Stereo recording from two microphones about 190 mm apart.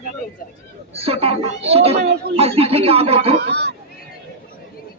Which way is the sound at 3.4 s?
60° right (ahead or behind).